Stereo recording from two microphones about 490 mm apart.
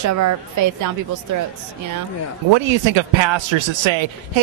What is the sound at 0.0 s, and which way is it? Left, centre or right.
Speech, right.